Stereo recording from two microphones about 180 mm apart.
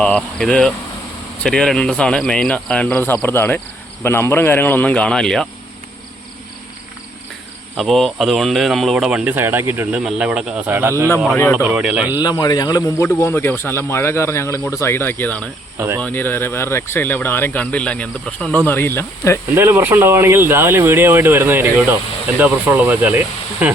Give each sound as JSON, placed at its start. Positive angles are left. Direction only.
{"t": 0.0, "sound": "speech", "side_deg": 5}
{"t": 7.8, "sound": "speech", "side_deg": 0}
{"t": 12.2, "sound": "a man's voice", "side_deg": 20}
{"t": 19.5, "sound": "speech", "side_deg": -10}